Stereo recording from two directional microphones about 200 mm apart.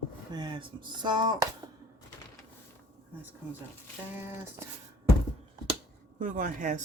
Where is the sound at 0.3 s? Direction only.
20° right (ahead or behind).